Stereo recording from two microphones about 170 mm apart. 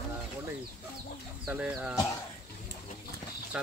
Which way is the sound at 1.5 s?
5° right (ahead or behind).